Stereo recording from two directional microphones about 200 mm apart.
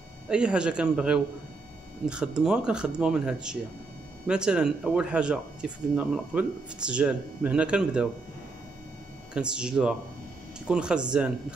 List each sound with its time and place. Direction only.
0.3 s speech: 5° right (ahead or behind)
9.3 s speech: 5° right (ahead or behind)